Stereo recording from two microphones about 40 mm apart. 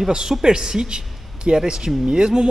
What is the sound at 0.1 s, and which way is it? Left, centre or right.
A man's voice, centre.